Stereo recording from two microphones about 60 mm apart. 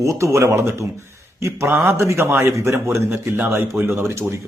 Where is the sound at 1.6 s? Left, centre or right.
Right.